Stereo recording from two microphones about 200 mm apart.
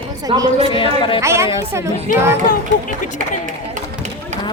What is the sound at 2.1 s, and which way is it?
Speech, 45° left (ahead or behind).